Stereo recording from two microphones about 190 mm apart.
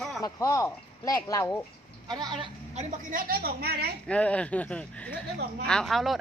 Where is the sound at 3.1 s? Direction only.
50° right (ahead or behind).